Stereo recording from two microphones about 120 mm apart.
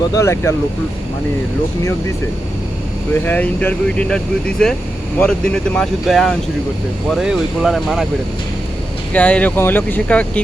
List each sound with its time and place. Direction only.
0.2 s speech: 20° left (ahead or behind)
3.2 s speech: 10° left (ahead or behind)
9.1 s speech: 10° left (ahead or behind)